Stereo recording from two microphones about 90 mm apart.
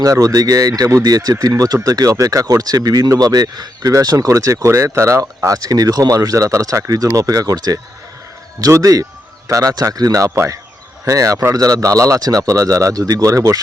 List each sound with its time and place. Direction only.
0.0 s speech: 40° right (ahead or behind)